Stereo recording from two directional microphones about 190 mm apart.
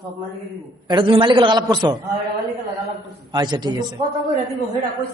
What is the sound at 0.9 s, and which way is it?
A man's voice, 25° right (ahead or behind).